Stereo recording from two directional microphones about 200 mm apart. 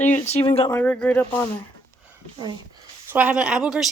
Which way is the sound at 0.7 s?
10° left (ahead or behind).